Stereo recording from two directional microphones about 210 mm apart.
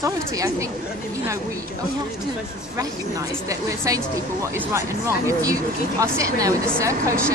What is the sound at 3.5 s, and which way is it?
Speech, 15° right (ahead or behind).